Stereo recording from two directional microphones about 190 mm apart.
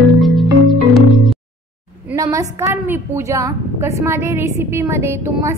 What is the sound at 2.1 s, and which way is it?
A woman's voice, 15° right (ahead or behind).